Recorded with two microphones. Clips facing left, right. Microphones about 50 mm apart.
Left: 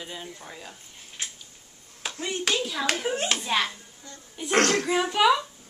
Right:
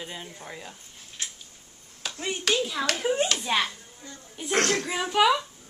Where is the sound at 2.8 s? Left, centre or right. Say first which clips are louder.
Left 1 dB; centre.